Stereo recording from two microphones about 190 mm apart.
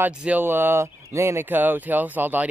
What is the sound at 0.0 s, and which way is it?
Speech, 10° right (ahead or behind).